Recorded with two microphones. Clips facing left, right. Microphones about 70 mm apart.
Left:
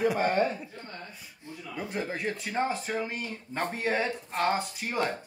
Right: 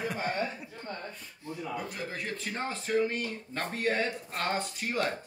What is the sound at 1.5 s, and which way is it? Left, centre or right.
Speech, right.